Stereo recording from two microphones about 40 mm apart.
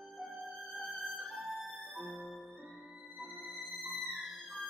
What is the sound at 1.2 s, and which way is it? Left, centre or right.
Music, right.